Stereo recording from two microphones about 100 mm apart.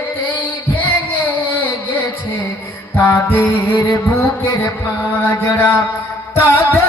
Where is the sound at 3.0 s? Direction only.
20° left (ahead or behind).